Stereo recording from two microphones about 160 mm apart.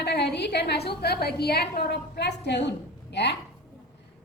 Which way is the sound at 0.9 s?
85° left.